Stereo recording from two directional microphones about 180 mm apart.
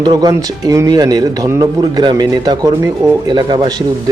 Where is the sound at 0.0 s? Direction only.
25° right (ahead or behind).